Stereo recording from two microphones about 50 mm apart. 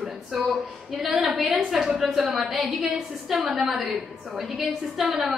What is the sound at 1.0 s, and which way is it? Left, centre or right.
Speech, centre.